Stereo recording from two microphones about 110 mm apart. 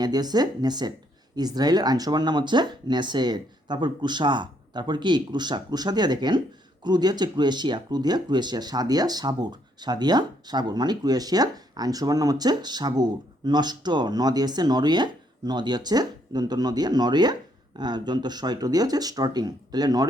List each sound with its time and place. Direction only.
0.0 s speech: 40° right (ahead or behind)